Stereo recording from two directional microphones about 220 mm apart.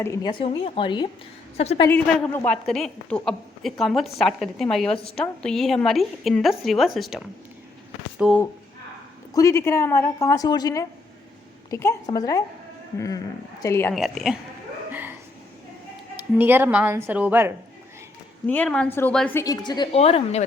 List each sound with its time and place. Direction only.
0.0 s speech: 15° left (ahead or behind)
1.9 s a woman's voice: 5° left (ahead or behind)
8.2 s a woman's voice: 5° right (ahead or behind)
9.3 s a woman's voice: 15° left (ahead or behind)
13.9 s a woman's voice: centre (ahead or behind)
14.8 s a sound: 10° right (ahead or behind)
16.3 s speech: 10° right (ahead or behind)
18.4 s a woman's voice: 5° left (ahead or behind); by 20.4 s 25° left (ahead or behind)